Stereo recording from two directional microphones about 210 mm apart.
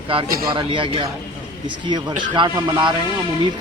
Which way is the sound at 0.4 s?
25° right (ahead or behind).